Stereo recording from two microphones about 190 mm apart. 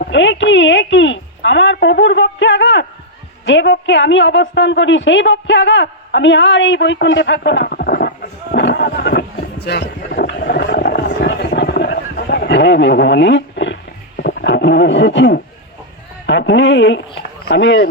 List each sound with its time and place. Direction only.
0.1 s a woman's voice: 75° left (ahead or behind); by 8.1 s 55° left (ahead or behind)
8.5 s a sound: 65° left (ahead or behind)
14.2 s wild animals: 55° left (ahead or behind)
16.2 s a woman's voice: 70° left (ahead or behind)